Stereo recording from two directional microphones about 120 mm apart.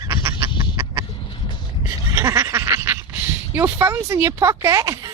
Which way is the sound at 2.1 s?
25° right (ahead or behind).